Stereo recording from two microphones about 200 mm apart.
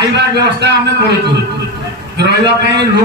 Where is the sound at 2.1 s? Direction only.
55° right (ahead or behind).